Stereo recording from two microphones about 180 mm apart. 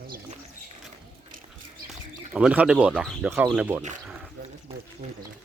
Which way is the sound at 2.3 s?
5° right (ahead or behind).